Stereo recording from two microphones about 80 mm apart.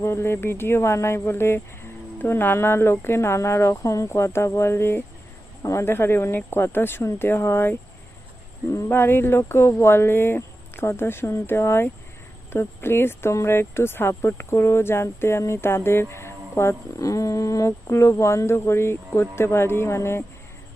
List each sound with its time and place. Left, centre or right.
0.0 s speech: left
8.9 s speech: left